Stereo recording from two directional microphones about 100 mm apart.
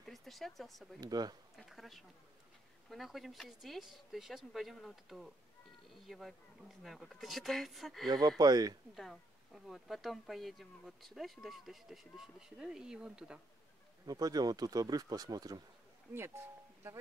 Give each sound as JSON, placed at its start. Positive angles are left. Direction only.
{"t": 0.0, "sound": "speech", "side_deg": 0}
{"t": 1.0, "sound": "speech", "side_deg": -40}
{"t": 1.6, "sound": "speech", "side_deg": 0}
{"t": 8.1, "sound": "speech", "side_deg": -40}
{"t": 8.9, "sound": "speech", "side_deg": 0}
{"t": 14.0, "sound": "speech", "side_deg": -40}
{"t": 16.2, "sound": "speech", "side_deg": -25}